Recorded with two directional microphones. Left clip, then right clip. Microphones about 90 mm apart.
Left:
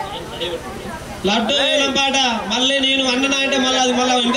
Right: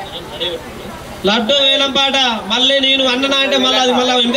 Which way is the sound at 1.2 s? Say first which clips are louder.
Right 4 dB; 20° right (ahead or behind).